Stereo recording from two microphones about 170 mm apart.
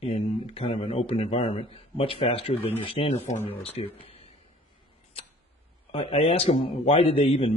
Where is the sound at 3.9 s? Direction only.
35° left (ahead or behind).